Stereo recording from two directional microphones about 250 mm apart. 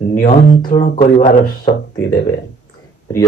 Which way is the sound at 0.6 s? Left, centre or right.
Centre.